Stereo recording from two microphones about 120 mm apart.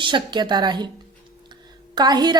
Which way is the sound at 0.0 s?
40° right (ahead or behind).